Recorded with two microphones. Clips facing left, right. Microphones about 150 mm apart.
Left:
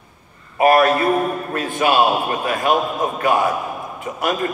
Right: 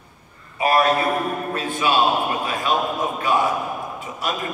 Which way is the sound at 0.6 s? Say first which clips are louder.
Left 4 dB; 50° left (ahead or behind).